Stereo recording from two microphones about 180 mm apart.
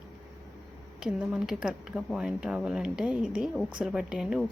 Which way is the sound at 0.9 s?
5° right (ahead or behind).